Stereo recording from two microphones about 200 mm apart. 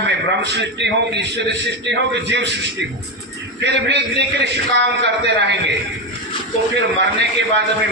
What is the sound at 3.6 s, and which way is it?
A man's voice, 60° right (ahead or behind).